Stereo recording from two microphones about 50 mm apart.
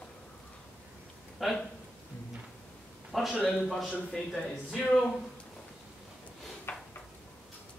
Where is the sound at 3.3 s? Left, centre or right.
Left.